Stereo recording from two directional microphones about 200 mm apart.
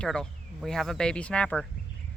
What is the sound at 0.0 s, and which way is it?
Speech, 5° left (ahead or behind).